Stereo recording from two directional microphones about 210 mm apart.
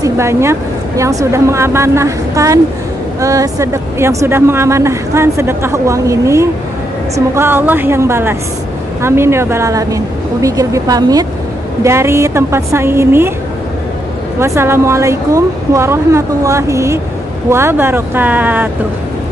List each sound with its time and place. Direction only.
0.0 s speech: 15° right (ahead or behind)
14.4 s speech: 10° right (ahead or behind)